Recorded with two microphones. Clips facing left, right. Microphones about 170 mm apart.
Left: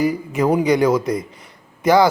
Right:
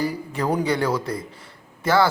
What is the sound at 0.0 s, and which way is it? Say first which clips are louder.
Speech: left 6 dB; 10° left (ahead or behind).